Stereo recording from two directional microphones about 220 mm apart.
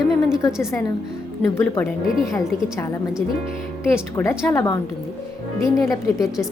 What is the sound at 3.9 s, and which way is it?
Speech, 10° left (ahead or behind).